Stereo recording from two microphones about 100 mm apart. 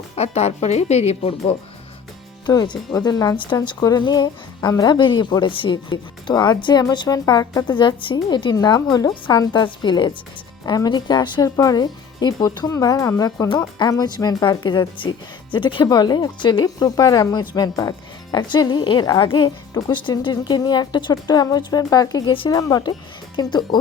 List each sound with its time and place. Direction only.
0.2 s speech: 90° left
2.9 s speech: 35° left (ahead or behind)
3.3 s speech: 55° left (ahead or behind)